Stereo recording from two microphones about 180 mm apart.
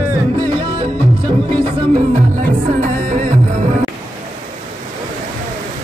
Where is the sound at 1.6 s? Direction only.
40° right (ahead or behind).